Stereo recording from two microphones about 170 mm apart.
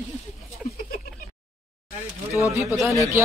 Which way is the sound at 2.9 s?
20° right (ahead or behind).